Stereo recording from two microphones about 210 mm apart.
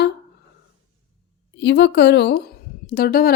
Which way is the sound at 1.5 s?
55° left (ahead or behind).